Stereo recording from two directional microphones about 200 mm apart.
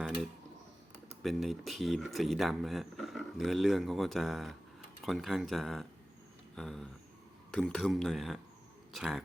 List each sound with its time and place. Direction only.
1.2 s speech: centre (ahead or behind)